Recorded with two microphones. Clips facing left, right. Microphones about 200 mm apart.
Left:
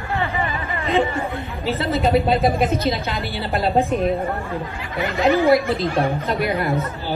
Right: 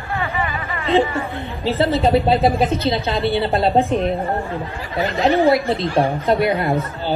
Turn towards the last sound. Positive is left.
turn(degrees=-30)  # may be behind; listen again after turning